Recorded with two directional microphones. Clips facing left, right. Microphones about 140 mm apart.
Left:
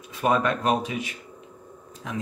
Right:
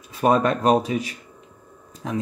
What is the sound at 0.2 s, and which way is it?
Speech, 40° right (ahead or behind).